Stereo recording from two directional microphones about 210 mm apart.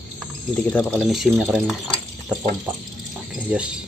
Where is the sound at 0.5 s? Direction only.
5° left (ahead or behind).